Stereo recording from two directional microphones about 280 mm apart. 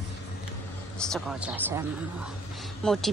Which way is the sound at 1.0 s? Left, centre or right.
Centre.